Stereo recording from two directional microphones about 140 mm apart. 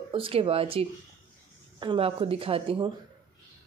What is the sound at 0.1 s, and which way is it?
Speech, 40° right (ahead or behind).